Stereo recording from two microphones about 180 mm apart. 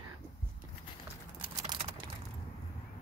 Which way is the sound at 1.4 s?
30° right (ahead or behind).